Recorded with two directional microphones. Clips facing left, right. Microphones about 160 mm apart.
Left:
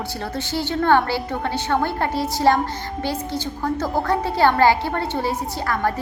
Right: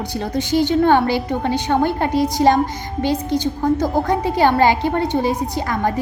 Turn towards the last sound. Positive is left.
turn(degrees=-20)  # may be behind; listen again after turning